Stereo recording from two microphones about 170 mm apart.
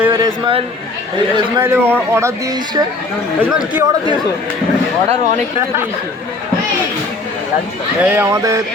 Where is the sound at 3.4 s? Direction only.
10° right (ahead or behind).